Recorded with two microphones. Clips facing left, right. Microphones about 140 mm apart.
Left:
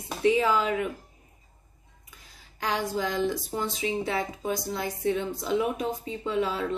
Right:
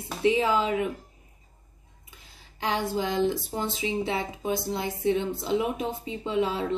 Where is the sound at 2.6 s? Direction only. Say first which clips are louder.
Right 1 dB; 25° right (ahead or behind).